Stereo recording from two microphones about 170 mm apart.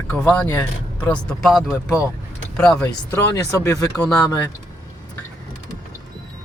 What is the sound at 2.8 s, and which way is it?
Speech, 20° left (ahead or behind).